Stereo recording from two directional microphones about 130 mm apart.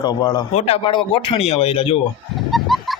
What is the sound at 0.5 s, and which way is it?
Speech, 50° left (ahead or behind).